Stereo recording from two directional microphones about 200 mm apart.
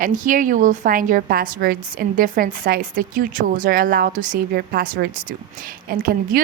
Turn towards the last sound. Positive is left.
turn(degrees=-50)  # may be behind; listen again after turning